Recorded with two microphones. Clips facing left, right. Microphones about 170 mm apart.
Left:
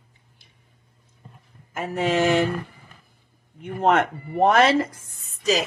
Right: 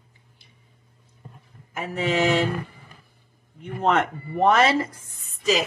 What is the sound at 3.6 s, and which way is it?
Speech, 55° left (ahead or behind).